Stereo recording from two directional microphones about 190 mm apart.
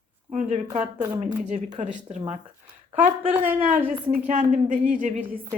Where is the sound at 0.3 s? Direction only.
35° right (ahead or behind).